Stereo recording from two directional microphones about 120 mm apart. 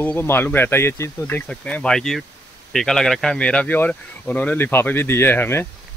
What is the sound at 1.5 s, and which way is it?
Speech, 5° left (ahead or behind).